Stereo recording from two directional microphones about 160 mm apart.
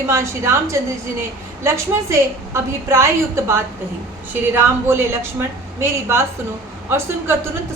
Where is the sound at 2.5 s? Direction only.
20° right (ahead or behind).